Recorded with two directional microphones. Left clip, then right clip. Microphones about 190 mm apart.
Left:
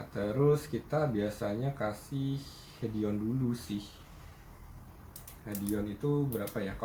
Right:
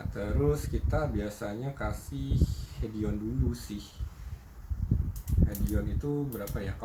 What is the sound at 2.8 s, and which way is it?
Speech, 10° left (ahead or behind).